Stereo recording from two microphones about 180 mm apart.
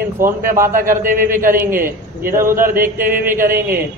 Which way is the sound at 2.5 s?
50° right (ahead or behind).